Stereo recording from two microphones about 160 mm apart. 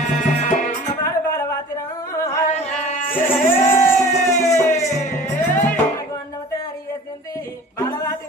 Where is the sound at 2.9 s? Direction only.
55° left (ahead or behind).